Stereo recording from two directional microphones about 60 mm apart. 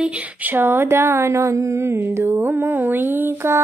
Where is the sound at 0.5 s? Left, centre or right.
Right.